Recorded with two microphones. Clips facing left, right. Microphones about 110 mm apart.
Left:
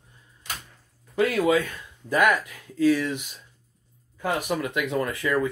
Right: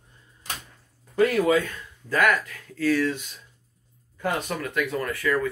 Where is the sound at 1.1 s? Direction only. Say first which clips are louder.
Right 1 dB; 10° left (ahead or behind).